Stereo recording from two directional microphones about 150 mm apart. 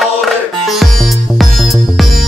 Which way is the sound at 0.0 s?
Centre (ahead or behind).